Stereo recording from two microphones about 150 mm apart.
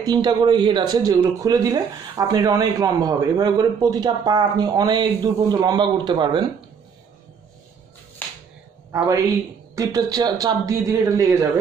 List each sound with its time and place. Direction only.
0.0 s speech: 25° right (ahead or behind)
8.2 s finger snapping: 10° left (ahead or behind)
8.9 s speech: 20° right (ahead or behind)